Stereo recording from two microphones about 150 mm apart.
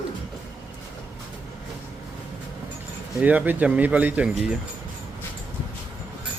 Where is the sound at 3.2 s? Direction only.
10° right (ahead or behind).